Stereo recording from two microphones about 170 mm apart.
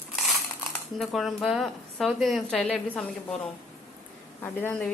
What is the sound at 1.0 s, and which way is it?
A woman's voice, centre (ahead or behind).